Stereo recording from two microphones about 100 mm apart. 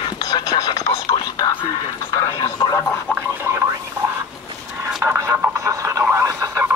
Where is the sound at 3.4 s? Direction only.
25° right (ahead or behind).